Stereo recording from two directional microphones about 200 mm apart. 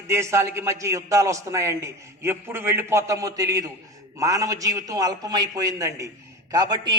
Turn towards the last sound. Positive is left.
turn(degrees=-20)  # may be behind; listen again after turning